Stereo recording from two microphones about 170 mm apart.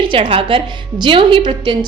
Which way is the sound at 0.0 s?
30° right (ahead or behind).